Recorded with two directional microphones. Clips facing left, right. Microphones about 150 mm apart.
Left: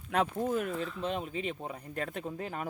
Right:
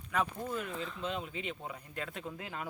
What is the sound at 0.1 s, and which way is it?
Speech, 60° left (ahead or behind).